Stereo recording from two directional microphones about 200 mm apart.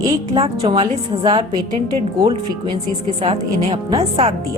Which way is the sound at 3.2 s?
25° right (ahead or behind).